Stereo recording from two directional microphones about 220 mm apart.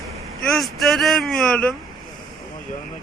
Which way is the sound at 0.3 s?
Centre (ahead or behind).